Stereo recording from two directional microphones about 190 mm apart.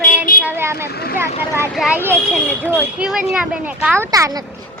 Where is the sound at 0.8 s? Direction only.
55° left (ahead or behind).